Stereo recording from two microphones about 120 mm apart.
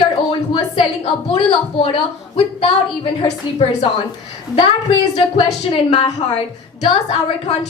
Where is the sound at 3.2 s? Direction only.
60° left (ahead or behind).